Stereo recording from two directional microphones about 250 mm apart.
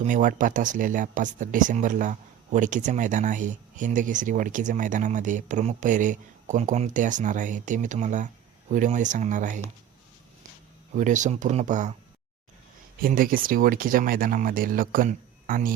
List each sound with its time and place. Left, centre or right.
0.0 s speech: right
10.9 s speech: right
13.0 s speech: right